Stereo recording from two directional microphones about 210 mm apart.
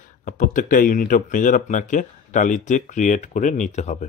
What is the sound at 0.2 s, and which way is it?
Speech, 40° left (ahead or behind).